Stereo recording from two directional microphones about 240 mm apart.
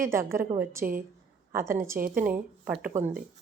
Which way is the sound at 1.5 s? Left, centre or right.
Centre.